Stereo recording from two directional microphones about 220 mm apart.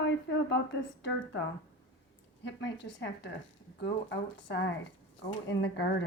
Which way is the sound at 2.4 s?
55° left (ahead or behind).